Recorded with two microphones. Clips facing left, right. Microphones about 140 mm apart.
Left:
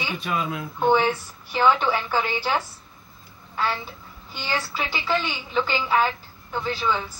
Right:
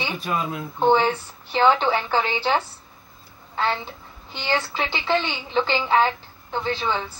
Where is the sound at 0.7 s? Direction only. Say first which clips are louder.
Right 2 dB; 20° right (ahead or behind).